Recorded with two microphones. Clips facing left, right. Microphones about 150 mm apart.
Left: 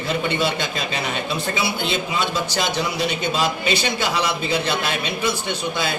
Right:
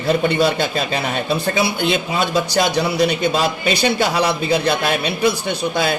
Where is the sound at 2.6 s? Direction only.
40° right (ahead or behind).